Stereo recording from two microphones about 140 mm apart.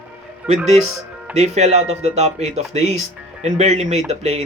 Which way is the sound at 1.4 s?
50° right (ahead or behind).